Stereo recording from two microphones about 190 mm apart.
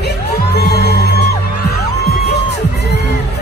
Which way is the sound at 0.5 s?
55° left (ahead or behind).